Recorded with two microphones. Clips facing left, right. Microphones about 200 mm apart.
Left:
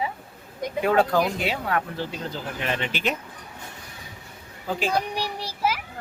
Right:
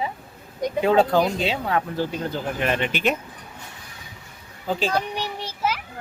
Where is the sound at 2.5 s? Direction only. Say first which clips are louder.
Right 3 dB; 55° right (ahead or behind).